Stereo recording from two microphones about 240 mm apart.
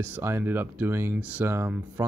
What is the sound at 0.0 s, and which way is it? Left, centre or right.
Speech, centre.